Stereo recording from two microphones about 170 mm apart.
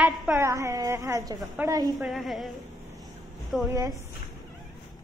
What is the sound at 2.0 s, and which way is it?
Speech, centre (ahead or behind).